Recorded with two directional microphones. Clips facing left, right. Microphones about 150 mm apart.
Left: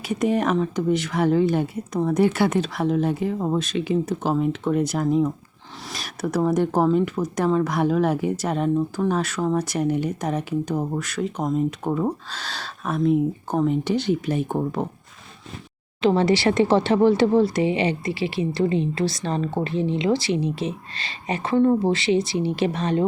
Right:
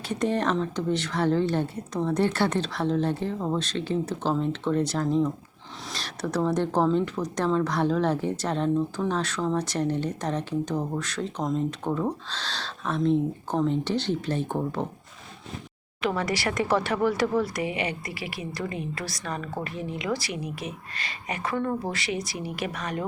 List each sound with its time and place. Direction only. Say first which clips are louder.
0.1 s speech: left 4 dB; 10° left (ahead or behind)
16.0 s speech: left 9 dB; 25° left (ahead or behind)